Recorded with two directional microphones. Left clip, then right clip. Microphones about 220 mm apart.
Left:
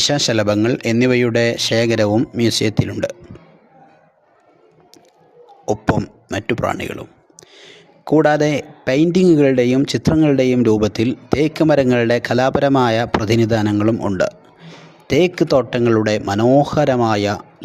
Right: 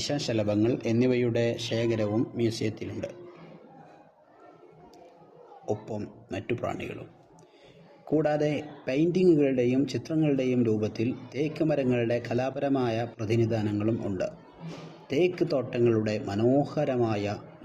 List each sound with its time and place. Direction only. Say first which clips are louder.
0.0 s speech: left 13 dB; 50° left (ahead or behind)
5.6 s speech: left 14 dB; 50° left (ahead or behind)
8.0 s speech: left 12 dB; 50° left (ahead or behind)